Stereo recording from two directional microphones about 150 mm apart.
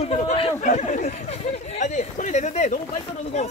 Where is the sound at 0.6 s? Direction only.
55° left (ahead or behind).